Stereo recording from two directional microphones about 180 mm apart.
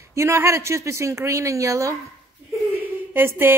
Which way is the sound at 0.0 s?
15° right (ahead or behind).